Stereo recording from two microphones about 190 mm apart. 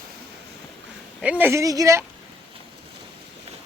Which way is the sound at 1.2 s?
10° right (ahead or behind).